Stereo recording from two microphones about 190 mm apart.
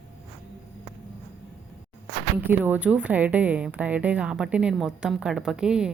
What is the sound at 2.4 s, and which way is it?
A woman's voice, 10° right (ahead or behind).